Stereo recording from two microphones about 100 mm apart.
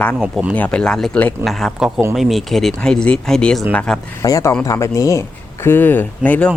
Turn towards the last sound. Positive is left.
turn(degrees=15)  # may be behind; listen again after turning